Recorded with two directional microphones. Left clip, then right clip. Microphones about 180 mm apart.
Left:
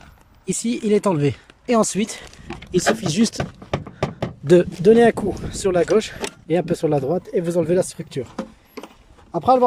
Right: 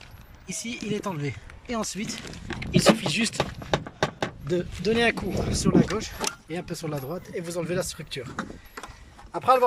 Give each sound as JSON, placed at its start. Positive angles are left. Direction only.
{"t": 0.4, "sound": "speech", "side_deg": 60}
{"t": 2.9, "sound": "speech", "side_deg": 35}
{"t": 3.7, "sound": "a sound", "side_deg": 10}
{"t": 4.4, "sound": "speech", "side_deg": 50}